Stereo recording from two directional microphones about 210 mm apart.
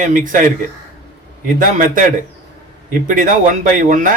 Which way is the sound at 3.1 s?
40° right (ahead or behind).